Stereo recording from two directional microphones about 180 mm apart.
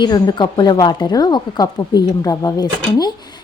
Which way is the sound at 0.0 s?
25° left (ahead or behind).